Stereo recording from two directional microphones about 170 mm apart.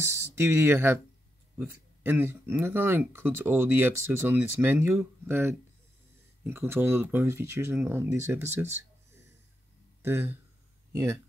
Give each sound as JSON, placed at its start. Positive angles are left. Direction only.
{"t": 0.0, "sound": "speech", "side_deg": -15}